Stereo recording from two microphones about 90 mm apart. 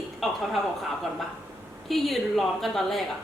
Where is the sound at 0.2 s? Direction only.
Centre (ahead or behind).